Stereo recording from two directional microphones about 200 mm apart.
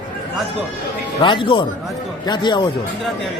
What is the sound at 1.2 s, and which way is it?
A man's voice, 25° left (ahead or behind).